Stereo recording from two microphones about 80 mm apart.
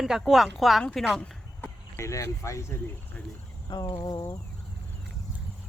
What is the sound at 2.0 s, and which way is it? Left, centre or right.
Speech, left.